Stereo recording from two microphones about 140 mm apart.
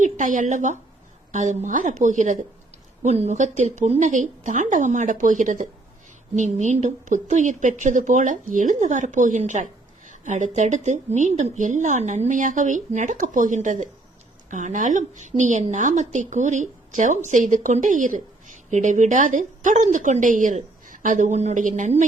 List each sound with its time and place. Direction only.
0.0 s a woman's voice: 65° right (ahead or behind)
3.0 s a woman's voice: 55° right (ahead or behind)